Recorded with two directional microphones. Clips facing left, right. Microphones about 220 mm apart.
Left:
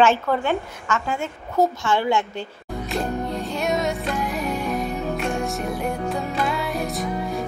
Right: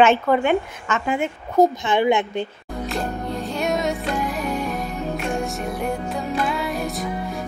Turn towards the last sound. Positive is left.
turn(degrees=0)  # may be behind; listen again after turning